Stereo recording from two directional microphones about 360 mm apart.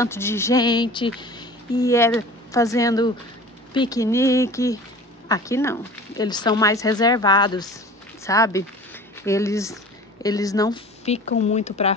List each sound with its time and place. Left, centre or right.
0.0 s speech: centre